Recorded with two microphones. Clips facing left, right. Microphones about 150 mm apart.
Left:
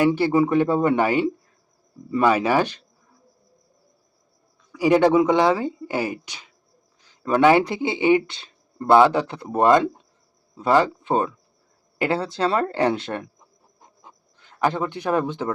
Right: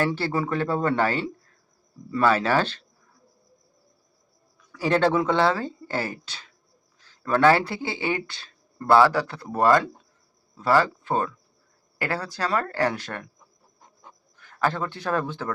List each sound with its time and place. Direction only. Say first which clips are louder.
0.0 s speech: left 7 dB; 15° left (ahead or behind)
4.7 s speech: left 5 dB; 15° left (ahead or behind)
14.0 s dog: even; 20° left (ahead or behind)